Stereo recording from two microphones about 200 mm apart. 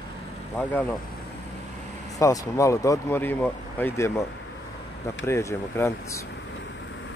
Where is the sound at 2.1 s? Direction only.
15° left (ahead or behind).